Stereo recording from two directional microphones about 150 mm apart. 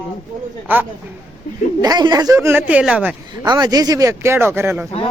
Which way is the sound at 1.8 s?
25° right (ahead or behind).